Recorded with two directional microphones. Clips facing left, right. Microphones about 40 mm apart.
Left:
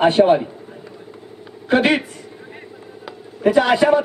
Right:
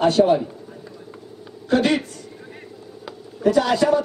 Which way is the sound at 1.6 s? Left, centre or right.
Left.